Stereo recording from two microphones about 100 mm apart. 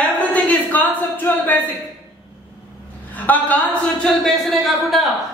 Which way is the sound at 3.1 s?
15° left (ahead or behind).